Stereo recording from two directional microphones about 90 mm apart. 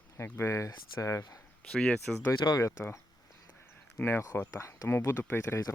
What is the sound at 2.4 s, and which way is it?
Speech, 55° left (ahead or behind).